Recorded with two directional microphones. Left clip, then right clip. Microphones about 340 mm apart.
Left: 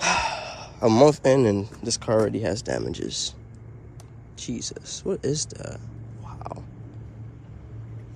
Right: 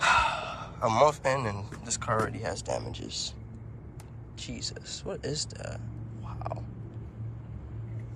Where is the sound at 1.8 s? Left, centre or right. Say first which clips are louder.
Left 6 dB; left.